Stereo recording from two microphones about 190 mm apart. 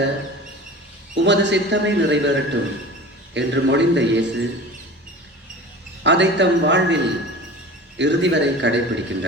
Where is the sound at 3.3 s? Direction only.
70° right (ahead or behind).